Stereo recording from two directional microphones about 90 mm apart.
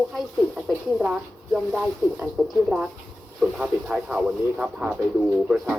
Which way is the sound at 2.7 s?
10° right (ahead or behind).